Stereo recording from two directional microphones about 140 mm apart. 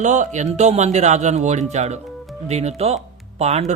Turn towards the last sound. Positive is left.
turn(degrees=-50)  # may be behind; listen again after turning